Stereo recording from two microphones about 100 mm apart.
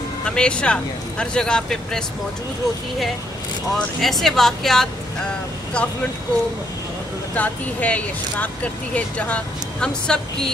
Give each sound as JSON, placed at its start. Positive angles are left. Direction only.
{"t": 0.2, "sound": "speech", "side_deg": 10}
{"t": 3.7, "sound": "speech", "side_deg": 0}
{"t": 7.3, "sound": "speech", "side_deg": 15}